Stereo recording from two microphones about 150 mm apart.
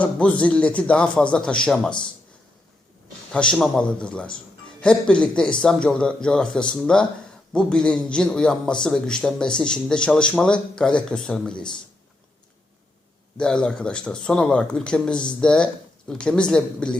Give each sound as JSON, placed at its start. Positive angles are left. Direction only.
{"t": 0.0, "sound": "a man's voice", "side_deg": 10}
{"t": 3.3, "sound": "a man's voice", "side_deg": 5}
{"t": 13.3, "sound": "a man's voice", "side_deg": 5}